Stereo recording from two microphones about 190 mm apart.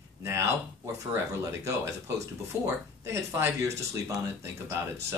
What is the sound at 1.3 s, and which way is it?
Speech, 15° right (ahead or behind).